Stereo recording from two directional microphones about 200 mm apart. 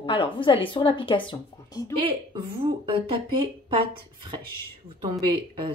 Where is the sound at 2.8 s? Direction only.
25° right (ahead or behind).